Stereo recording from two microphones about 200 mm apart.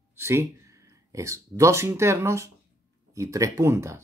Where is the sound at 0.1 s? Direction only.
10° right (ahead or behind).